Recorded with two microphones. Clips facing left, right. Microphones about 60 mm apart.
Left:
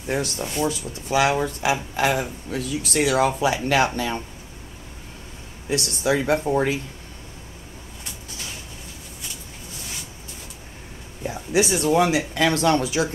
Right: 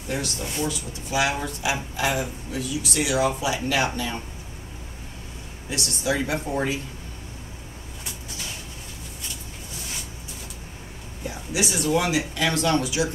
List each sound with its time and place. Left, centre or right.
0.1 s speech: left
5.7 s speech: left
11.2 s speech: left